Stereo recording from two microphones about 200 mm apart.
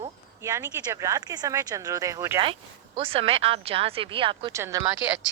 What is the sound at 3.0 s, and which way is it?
Speech, 30° right (ahead or behind).